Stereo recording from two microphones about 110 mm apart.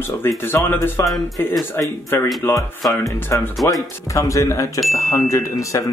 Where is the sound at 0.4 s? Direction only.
20° left (ahead or behind).